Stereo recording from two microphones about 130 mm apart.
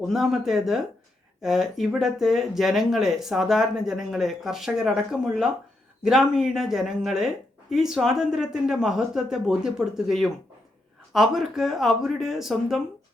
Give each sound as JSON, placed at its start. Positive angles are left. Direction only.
{"t": 0.0, "sound": "speech", "side_deg": -5}